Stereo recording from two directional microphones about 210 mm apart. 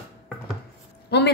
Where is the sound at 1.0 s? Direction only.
50° left (ahead or behind).